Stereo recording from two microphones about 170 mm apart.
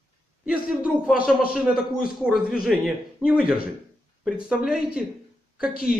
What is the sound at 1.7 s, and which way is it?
Speech, 60° left (ahead or behind).